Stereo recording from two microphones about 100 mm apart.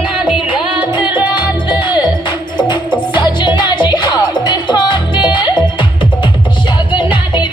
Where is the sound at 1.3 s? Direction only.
50° left (ahead or behind).